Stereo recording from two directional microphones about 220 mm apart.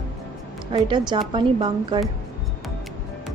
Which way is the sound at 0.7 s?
20° right (ahead or behind).